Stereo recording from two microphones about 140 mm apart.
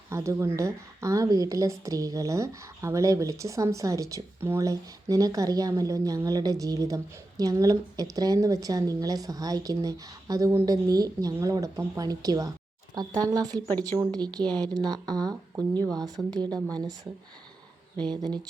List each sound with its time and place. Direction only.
0.1 s speech: 20° right (ahead or behind)
13.7 s speech: 15° left (ahead or behind)
14.0 s speech: 30° right (ahead or behind)
17.9 s speech: 30° right (ahead or behind)